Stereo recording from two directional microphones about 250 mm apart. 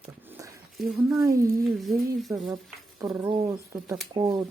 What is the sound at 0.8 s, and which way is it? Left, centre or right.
Speech, centre.